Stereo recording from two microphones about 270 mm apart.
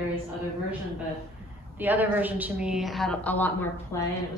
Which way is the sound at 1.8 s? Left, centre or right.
Centre.